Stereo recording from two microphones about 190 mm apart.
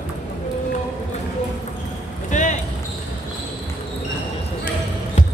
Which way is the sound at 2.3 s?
40° left (ahead or behind).